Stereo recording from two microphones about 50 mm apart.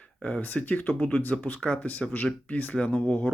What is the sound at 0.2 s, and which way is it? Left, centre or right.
Speech, left.